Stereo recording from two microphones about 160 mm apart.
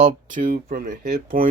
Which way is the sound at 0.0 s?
60° right (ahead or behind).